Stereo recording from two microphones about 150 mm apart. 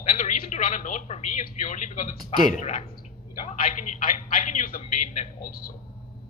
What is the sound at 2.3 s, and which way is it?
A man's voice, 50° left (ahead or behind).